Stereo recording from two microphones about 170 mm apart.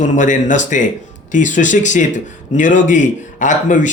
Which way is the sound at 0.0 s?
45° left (ahead or behind).